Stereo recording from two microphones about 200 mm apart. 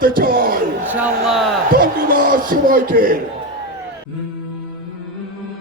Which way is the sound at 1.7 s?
45° right (ahead or behind).